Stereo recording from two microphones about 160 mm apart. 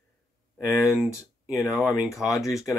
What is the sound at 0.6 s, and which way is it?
Speech, 5° right (ahead or behind).